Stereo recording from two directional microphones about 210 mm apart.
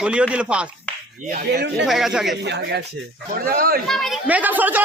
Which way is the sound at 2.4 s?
55° right (ahead or behind).